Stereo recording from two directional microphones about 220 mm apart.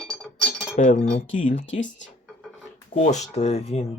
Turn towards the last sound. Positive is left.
turn(degrees=30)  # may be behind; listen again after turning